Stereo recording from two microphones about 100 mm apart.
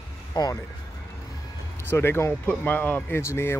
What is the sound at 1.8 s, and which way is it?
Speech, 25° left (ahead or behind).